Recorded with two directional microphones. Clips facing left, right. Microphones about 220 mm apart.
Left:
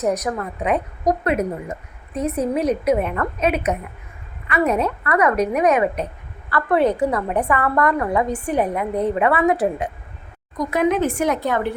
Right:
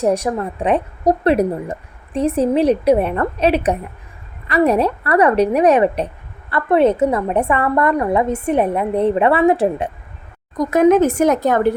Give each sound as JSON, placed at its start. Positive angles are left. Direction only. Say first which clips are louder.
{"t": 0.0, "sound": "a woman's voice", "louder": "right 4 dB", "side_deg": -30}
{"t": 10.7, "sound": "speech", "louder": "right 7 dB", "side_deg": -45}